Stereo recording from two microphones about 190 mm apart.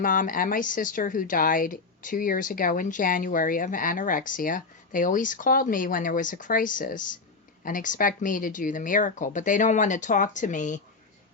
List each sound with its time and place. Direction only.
0.0 s a woman's voice: 45° left (ahead or behind)